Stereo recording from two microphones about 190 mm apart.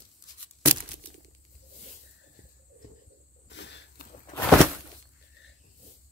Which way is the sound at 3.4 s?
70° left (ahead or behind).